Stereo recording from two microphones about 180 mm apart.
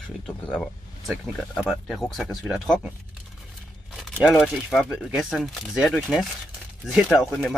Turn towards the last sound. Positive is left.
turn(degrees=0)  # may be behind; listen again after turning